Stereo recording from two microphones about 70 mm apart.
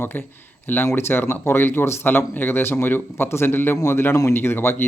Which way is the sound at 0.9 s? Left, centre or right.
Left.